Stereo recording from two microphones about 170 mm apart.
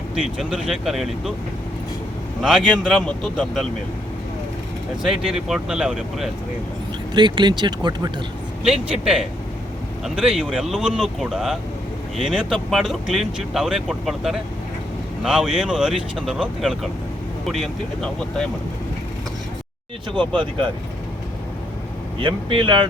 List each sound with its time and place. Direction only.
0.2 s speech: 5° right (ahead or behind)
2.4 s speech: centre (ahead or behind)
5.0 s speech: 5° right (ahead or behind)
7.1 s speech: 25° right (ahead or behind)
8.6 s speech: 5° right (ahead or behind)
20.1 s speech: 30° right (ahead or behind)
22.2 s speech: 30° right (ahead or behind)